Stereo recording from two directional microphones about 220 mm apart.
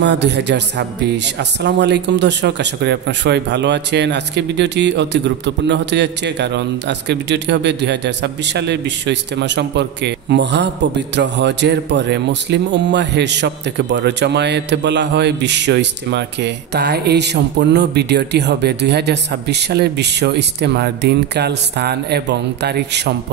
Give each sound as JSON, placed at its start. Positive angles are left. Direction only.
{"t": 0.0, "sound": "speech", "side_deg": -50}